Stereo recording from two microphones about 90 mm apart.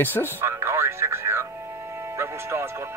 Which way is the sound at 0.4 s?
25° right (ahead or behind).